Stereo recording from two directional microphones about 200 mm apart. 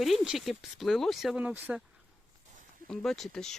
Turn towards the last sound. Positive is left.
turn(degrees=0)  # may be behind; listen again after turning